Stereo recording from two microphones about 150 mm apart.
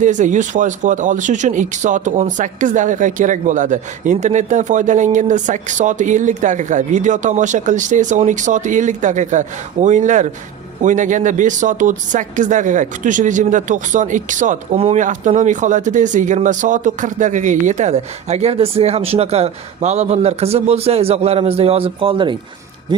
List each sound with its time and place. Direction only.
0.0 s speech: 55° right (ahead or behind); by 23.1 s 30° right (ahead or behind)